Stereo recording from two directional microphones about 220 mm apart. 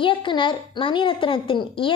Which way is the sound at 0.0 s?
20° left (ahead or behind).